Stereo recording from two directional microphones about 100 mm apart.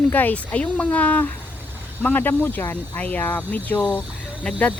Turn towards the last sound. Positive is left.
turn(degrees=15)  # may be behind; listen again after turning